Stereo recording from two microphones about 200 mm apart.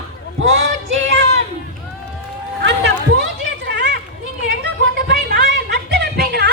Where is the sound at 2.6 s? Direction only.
60° right (ahead or behind).